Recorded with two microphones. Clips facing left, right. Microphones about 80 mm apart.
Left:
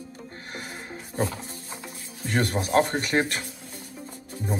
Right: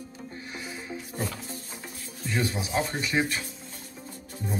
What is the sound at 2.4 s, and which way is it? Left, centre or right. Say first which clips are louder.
Speech: left 6 dB; left.